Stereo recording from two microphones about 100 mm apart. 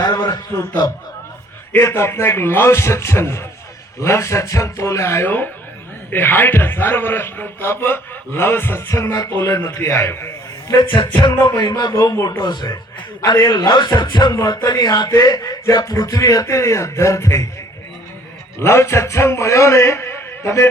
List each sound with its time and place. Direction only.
0.0 s a sound: 40° left (ahead or behind)
1.8 s a man's voice: 25° left (ahead or behind)
10.9 s music: 50° left (ahead or behind)
11.8 s speech: 40° left (ahead or behind)
12.1 s a man's voice: 25° left (ahead or behind)
12.4 s music: 45° left (ahead or behind)
14.3 s speech: 35° left (ahead or behind)
18.6 s a man's voice: 25° left (ahead or behind)